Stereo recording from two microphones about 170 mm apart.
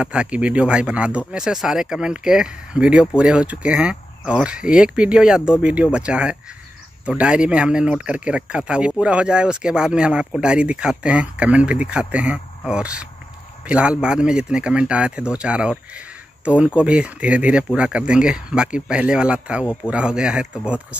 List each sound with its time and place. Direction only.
0.0 s speech: 5° right (ahead or behind)
19.6 s speech: 15° left (ahead or behind)
19.9 s speech: 5° right (ahead or behind)